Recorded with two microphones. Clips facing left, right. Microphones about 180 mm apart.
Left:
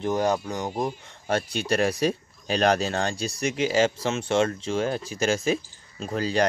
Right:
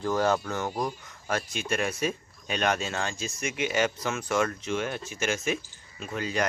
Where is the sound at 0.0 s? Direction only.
15° left (ahead or behind).